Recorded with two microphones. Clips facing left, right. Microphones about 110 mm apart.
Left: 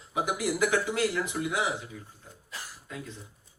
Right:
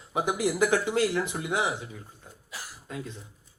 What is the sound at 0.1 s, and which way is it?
Speech, 30° right (ahead or behind).